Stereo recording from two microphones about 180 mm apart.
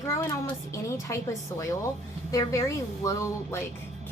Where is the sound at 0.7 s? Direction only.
15° left (ahead or behind).